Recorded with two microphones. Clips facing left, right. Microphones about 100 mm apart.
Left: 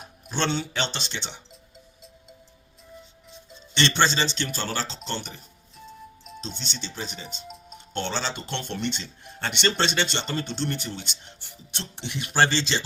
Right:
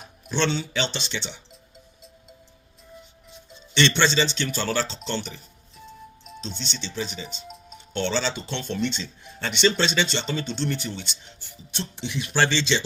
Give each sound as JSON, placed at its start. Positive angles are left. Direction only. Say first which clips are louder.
{"t": 0.0, "sound": "speech", "louder": "right 3 dB", "side_deg": 45}
{"t": 3.8, "sound": "speech", "louder": "right 2 dB", "side_deg": 45}
{"t": 6.4, "sound": "speech", "louder": "right 2 dB", "side_deg": 45}
{"t": 7.4, "sound": "music", "louder": "even", "side_deg": 0}
{"t": 7.9, "sound": "speech", "louder": "right 3 dB", "side_deg": 45}